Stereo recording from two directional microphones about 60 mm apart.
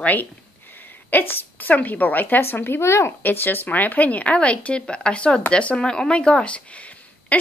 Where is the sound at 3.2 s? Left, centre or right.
Left; by 6.6 s centre.